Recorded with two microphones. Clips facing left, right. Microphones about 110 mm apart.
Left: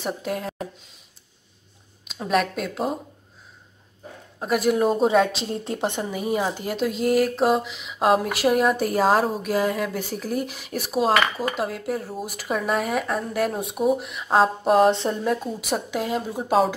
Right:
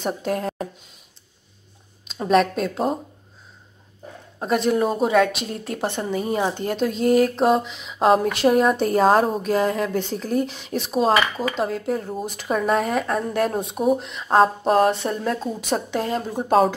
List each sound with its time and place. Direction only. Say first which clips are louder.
0.0 s speech: right 3 dB; centre (ahead or behind)
2.0 s speech: right 5 dB; centre (ahead or behind)
4.4 s speech: right 1 dB; 5° left (ahead or behind)
5.0 s a woman's voice: right 1 dB; 25° left (ahead or behind); by 14.9 s centre (ahead or behind)
14.9 s a woman's voice: left 1 dB; 25° left (ahead or behind)
15.6 s speech: right 2 dB; 5° left (ahead or behind)